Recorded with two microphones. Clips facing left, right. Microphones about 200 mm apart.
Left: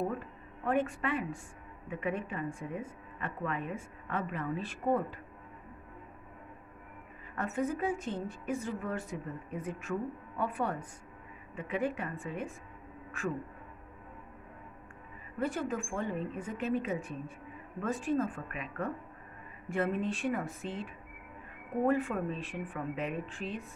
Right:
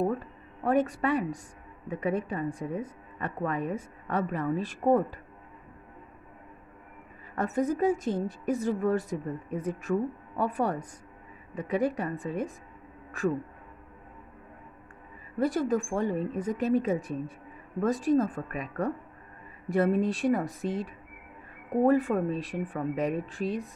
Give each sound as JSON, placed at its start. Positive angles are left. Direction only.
{"t": 0.2, "sound": "a woman's voice", "side_deg": -35}
{"t": 7.3, "sound": "a woman's voice", "side_deg": -40}
{"t": 15.4, "sound": "a woman's voice", "side_deg": -40}